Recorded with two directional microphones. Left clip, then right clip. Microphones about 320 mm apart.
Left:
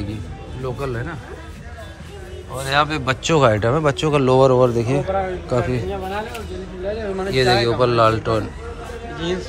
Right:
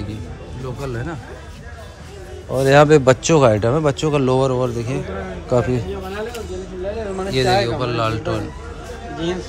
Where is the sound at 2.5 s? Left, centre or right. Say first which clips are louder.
Right 8 dB; right.